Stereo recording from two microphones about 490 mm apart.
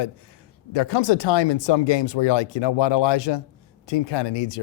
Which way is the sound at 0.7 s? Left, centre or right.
Left.